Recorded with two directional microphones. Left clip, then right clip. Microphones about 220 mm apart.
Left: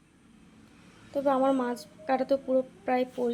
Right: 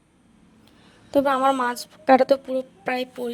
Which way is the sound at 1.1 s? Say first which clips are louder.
Right 6 dB; 45° right (ahead or behind).